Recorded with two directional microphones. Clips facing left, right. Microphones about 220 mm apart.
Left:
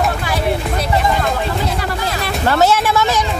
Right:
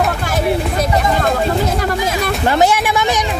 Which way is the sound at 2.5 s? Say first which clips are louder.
Left 1 dB; 15° right (ahead or behind).